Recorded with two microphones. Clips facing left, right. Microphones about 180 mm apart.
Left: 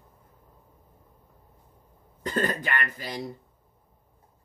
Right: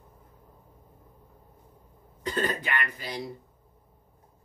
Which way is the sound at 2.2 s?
45° left (ahead or behind).